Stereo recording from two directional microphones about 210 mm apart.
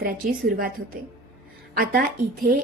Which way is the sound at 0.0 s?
40° right (ahead or behind).